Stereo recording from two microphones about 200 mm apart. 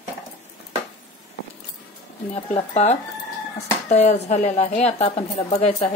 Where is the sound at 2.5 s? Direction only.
30° left (ahead or behind).